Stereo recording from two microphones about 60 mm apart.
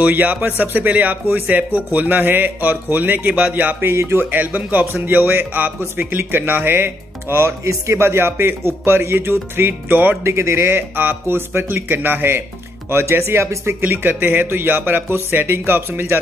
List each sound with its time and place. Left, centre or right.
0.0 s speech: right
3.9 s speech: right
7.6 s speech: right
10.2 s speech: right
13.8 s speech: right